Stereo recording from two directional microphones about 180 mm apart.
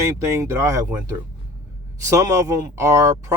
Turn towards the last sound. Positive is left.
turn(degrees=-15)  # may be behind; listen again after turning